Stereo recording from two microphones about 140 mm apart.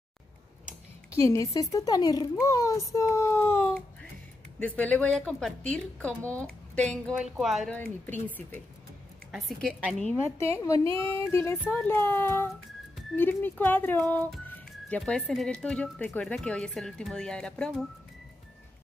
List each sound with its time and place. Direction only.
1.1 s speech: 20° left (ahead or behind)
7.2 s speech: 5° right (ahead or behind)
7.7 s speech: 10° left (ahead or behind)
9.3 s speech: centre (ahead or behind)
10.4 s speech: 20° left (ahead or behind); by 17.8 s 5° left (ahead or behind)